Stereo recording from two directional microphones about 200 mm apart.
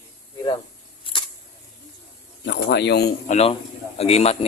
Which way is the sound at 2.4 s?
60° left (ahead or behind).